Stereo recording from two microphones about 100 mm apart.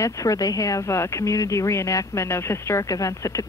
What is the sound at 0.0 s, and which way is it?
Speech, 35° left (ahead or behind).